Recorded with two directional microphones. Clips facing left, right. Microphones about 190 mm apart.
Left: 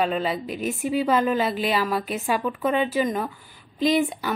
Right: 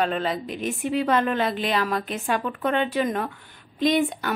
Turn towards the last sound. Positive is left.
turn(degrees=0)  # may be behind; listen again after turning